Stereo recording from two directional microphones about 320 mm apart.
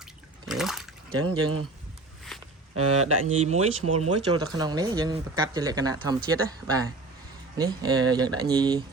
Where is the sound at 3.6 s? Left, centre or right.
Right.